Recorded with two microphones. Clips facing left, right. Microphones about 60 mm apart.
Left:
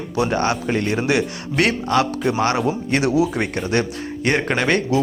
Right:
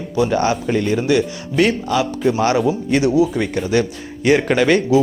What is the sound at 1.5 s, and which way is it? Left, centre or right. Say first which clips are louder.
Speech: right 2 dB; left.